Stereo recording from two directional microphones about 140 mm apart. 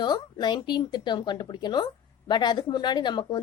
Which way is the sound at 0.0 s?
30° left (ahead or behind).